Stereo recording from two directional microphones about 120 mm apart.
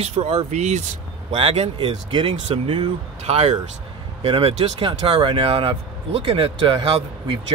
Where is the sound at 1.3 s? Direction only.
55° right (ahead or behind).